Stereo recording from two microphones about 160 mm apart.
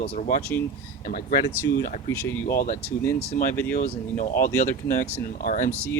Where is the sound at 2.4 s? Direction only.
65° left (ahead or behind).